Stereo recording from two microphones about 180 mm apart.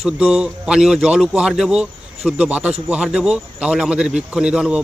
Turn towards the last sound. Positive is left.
turn(degrees=-5)  # may be behind; listen again after turning